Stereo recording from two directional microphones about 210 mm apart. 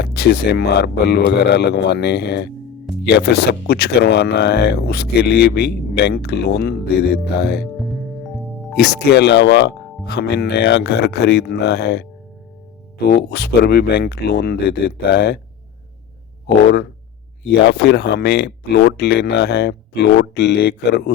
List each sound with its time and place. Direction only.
0.0 s speech: 50° left (ahead or behind)
8.7 s speech: 50° left (ahead or behind)
17.5 s speech: 55° left (ahead or behind)